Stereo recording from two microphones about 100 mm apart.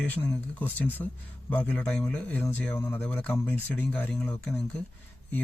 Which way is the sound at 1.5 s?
15° left (ahead or behind).